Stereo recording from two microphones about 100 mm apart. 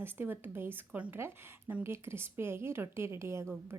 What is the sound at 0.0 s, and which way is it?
A woman's voice, 20° right (ahead or behind).